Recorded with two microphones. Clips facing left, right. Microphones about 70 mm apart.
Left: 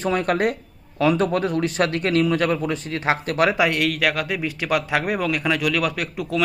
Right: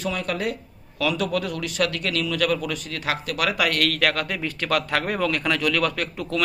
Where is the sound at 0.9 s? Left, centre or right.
Left.